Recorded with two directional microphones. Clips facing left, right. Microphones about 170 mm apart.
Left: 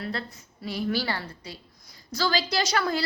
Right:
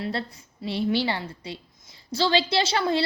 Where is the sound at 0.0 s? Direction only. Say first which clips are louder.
Right 3 dB; 30° right (ahead or behind).